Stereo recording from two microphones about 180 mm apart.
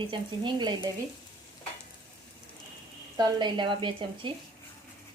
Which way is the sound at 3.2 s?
25° right (ahead or behind).